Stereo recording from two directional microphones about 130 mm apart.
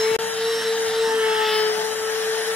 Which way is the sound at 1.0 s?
5° right (ahead or behind).